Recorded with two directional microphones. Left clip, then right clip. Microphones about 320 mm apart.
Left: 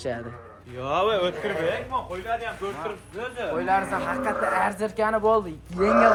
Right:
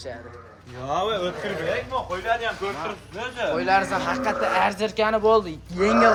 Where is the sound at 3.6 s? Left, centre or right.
Centre.